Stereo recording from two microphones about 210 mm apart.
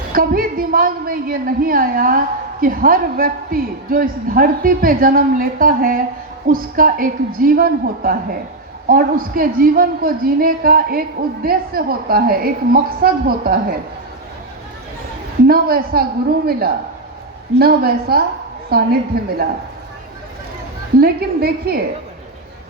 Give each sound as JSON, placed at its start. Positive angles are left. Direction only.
{"t": 0.1, "sound": "a woman's voice", "side_deg": -45}
{"t": 15.4, "sound": "a woman's voice", "side_deg": -45}
{"t": 21.0, "sound": "a woman's voice", "side_deg": -45}